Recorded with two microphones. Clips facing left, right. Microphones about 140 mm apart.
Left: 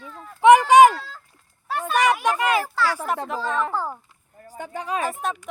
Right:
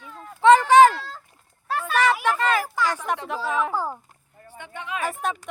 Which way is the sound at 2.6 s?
15° right (ahead or behind).